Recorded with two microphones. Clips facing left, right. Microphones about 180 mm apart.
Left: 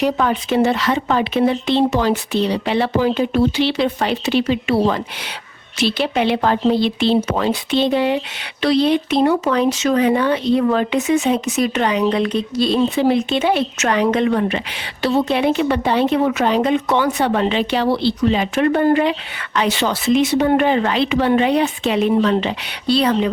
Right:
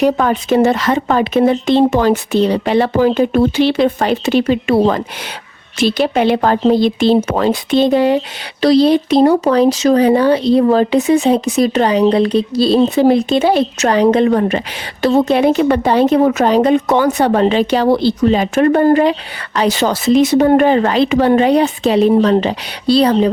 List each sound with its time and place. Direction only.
0.0 s speech: 45° right (ahead or behind)